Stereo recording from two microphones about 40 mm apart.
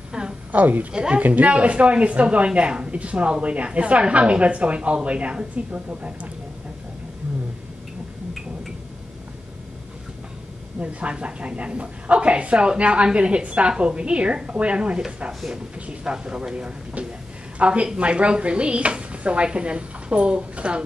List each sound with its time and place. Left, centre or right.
0.5 s a woman's voice: right
0.9 s speech: right
1.2 s speech: right
10.8 s a woman's voice: right